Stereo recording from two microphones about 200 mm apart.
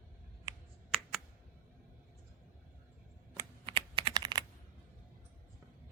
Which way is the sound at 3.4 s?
25° right (ahead or behind).